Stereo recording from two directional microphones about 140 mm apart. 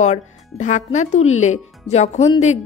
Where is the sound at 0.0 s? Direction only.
55° left (ahead or behind).